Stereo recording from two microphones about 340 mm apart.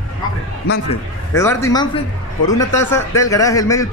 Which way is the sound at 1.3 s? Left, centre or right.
Centre.